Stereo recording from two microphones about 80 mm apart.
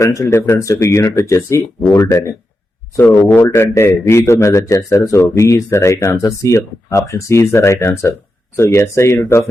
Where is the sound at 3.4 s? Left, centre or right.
Left.